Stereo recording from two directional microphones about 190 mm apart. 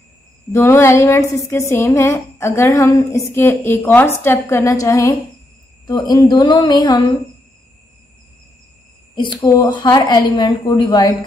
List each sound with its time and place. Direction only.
0.5 s a woman's voice: 15° left (ahead or behind)
9.1 s a woman's voice: 25° left (ahead or behind)